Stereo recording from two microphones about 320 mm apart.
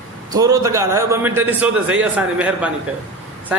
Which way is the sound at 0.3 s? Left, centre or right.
Centre.